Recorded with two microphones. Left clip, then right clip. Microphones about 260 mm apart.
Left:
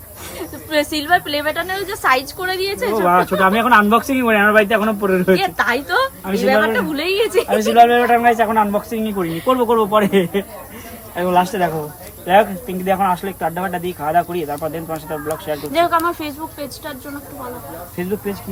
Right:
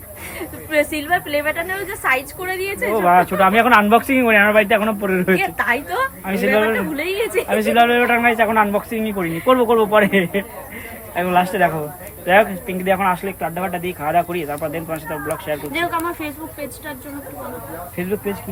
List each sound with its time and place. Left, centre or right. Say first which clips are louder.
0.3 s a woman's voice: even; centre
7.7 s a woman's voice: left 4 dB; centre
15.8 s speech: left 9 dB; left